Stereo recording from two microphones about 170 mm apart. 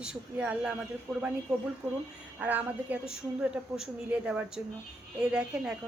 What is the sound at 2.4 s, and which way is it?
A woman's voice, 10° right (ahead or behind).